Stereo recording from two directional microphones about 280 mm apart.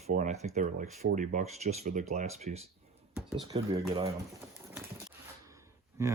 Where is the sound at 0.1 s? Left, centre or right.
Right.